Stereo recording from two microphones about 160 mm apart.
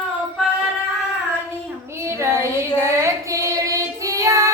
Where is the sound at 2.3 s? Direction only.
15° right (ahead or behind).